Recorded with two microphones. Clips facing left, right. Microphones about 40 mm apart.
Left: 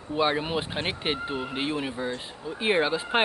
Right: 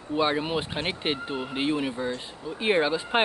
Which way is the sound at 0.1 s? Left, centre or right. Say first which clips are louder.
Even; centre.